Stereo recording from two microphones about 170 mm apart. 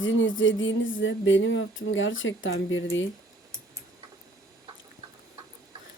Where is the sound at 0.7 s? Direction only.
90° left.